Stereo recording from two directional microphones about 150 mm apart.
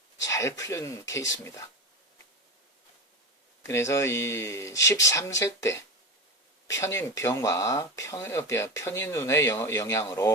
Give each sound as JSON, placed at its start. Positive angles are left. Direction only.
{"t": 0.2, "sound": "speech", "side_deg": 20}
{"t": 3.6, "sound": "speech", "side_deg": 20}